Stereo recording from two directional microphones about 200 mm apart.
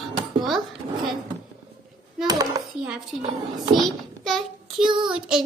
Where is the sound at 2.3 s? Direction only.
20° right (ahead or behind).